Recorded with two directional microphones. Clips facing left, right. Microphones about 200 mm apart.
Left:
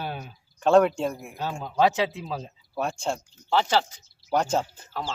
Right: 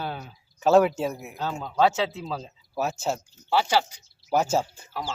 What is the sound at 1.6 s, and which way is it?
Speech, 15° left (ahead or behind).